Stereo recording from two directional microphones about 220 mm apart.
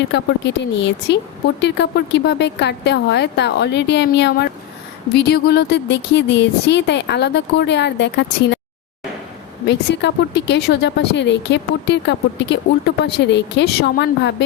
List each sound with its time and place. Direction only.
0.1 s speech: 50° left (ahead or behind)
9.6 s speech: 50° left (ahead or behind)